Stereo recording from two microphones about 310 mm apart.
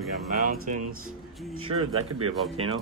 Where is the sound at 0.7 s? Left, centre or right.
Right.